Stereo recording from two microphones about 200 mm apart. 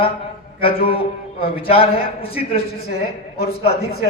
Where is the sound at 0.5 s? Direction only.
30° left (ahead or behind).